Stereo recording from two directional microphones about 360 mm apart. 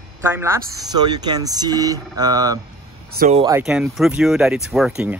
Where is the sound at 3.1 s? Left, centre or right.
Right.